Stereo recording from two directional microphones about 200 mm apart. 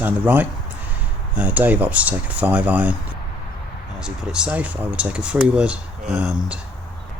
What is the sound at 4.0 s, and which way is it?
Speech, 5° right (ahead or behind).